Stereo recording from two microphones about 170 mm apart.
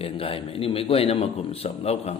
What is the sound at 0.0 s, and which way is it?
A man's voice, 35° left (ahead or behind).